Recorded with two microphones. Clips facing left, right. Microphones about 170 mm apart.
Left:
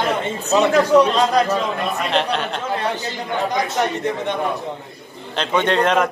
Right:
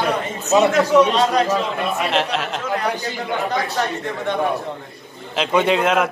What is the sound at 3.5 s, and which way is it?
Speech, 15° left (ahead or behind).